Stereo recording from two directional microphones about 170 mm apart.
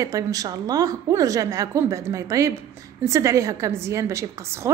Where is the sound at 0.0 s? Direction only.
20° right (ahead or behind).